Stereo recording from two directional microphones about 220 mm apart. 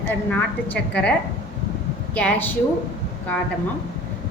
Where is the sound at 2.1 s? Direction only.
5° left (ahead or behind).